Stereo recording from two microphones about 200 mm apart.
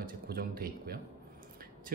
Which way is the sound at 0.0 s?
50° right (ahead or behind).